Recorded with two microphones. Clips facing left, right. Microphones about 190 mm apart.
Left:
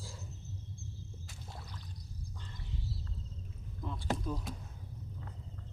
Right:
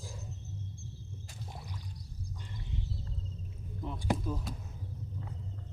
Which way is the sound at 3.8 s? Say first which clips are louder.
Right 3 dB; 15° right (ahead or behind).